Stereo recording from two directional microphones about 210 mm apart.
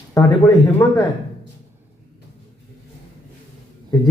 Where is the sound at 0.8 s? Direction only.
15° left (ahead or behind).